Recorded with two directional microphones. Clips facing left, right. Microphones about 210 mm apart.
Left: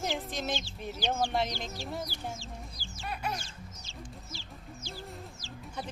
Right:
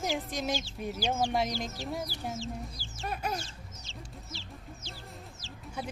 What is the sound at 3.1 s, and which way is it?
Chicken, 40° right (ahead or behind).